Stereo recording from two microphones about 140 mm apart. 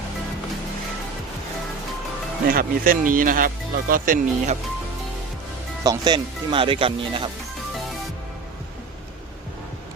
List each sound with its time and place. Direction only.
2.5 s speech: 90° right
5.8 s speech: 30° right (ahead or behind)